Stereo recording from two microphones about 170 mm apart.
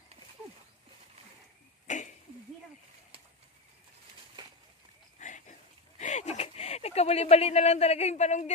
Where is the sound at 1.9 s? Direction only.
45° left (ahead or behind).